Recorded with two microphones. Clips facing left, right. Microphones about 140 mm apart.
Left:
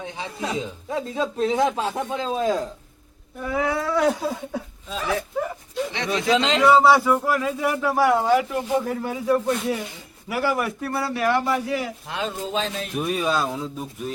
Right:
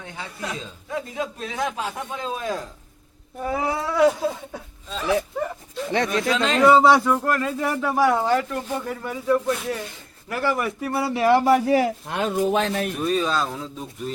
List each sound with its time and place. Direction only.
0.0 s speech: 20° left (ahead or behind)
3.4 s speech: 30° right (ahead or behind)
3.9 s speech: centre (ahead or behind)
6.1 s speech: 20° left (ahead or behind)
6.7 s a man's voice: centre (ahead or behind)
10.8 s speech: 15° right (ahead or behind)
11.3 s a man's voice: 40° right (ahead or behind); by 12.9 s 60° right (ahead or behind)
13.0 s speech: 10° left (ahead or behind)